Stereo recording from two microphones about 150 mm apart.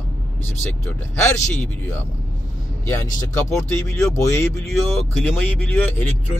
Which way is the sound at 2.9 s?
20° left (ahead or behind).